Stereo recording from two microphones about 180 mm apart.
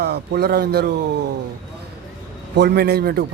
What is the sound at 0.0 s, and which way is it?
Speech, 65° right (ahead or behind).